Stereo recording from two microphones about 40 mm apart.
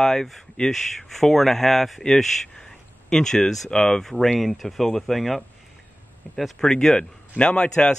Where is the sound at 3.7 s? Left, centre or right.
Centre.